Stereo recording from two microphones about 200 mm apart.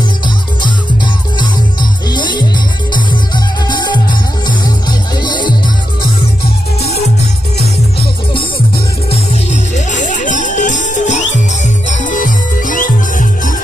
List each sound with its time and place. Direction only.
1.4 s music: 20° left (ahead or behind)
3.6 s music: 20° left (ahead or behind)
9.1 s music: 35° left (ahead or behind)